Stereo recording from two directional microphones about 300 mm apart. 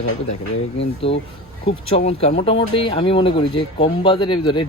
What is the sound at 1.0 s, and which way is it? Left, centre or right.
Speech, centre.